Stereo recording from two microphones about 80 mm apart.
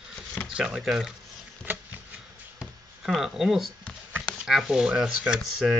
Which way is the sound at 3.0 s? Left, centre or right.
Centre.